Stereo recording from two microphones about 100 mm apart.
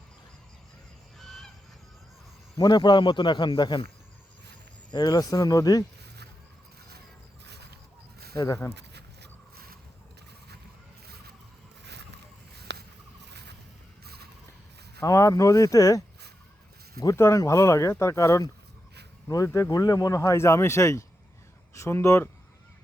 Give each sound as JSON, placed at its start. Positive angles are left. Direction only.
{"t": 1.2, "sound": "goose", "side_deg": 5}
{"t": 2.6, "sound": "a man's voice", "side_deg": 45}
{"t": 4.9, "sound": "speech", "side_deg": 45}
{"t": 8.4, "sound": "speech", "side_deg": 30}
{"t": 15.0, "sound": "speech", "side_deg": 30}
{"t": 17.2, "sound": "speech", "side_deg": 30}